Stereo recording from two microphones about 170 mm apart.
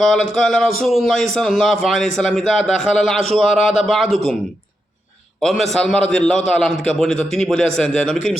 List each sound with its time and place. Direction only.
0.0 s a man's voice: 5° left (ahead or behind)
5.4 s a man's voice: centre (ahead or behind)